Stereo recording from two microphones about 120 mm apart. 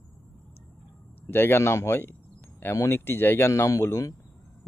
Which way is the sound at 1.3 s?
20° left (ahead or behind).